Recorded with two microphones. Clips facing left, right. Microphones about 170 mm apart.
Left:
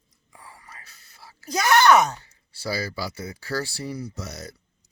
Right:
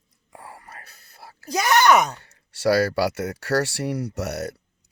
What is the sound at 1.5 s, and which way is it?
Speech, 15° right (ahead or behind).